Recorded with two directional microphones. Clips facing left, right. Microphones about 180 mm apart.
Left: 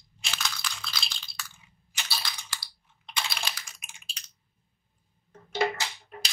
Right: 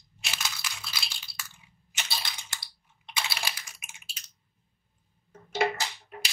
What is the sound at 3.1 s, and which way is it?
Computer keyboard, 5° right (ahead or behind).